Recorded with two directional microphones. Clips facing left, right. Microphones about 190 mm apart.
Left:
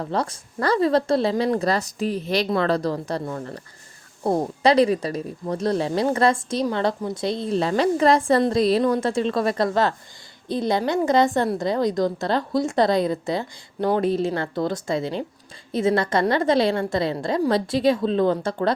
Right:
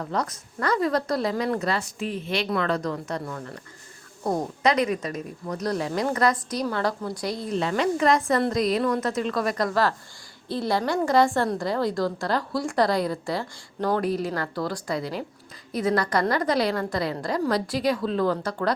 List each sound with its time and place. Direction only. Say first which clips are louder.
0.0 s a woman's voice: left 3 dB; 30° left (ahead or behind)